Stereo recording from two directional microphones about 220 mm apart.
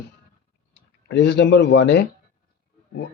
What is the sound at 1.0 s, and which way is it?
Speech, 50° left (ahead or behind).